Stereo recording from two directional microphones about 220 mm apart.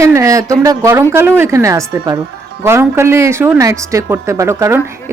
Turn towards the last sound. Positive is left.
turn(degrees=-10)  # may be behind; listen again after turning